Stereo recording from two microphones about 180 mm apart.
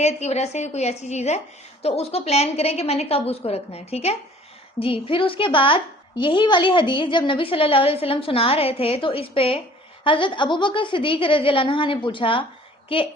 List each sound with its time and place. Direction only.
0.0 s a woman's voice: 40° left (ahead or behind)